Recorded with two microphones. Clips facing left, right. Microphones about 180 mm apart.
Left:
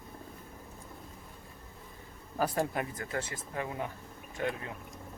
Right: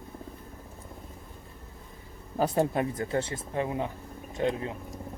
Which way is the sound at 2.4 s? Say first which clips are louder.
Right 5 dB; 25° right (ahead or behind).